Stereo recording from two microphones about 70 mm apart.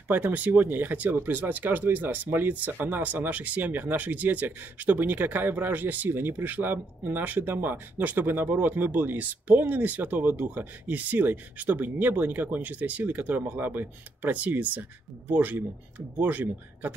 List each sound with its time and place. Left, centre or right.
0.1 s speech: right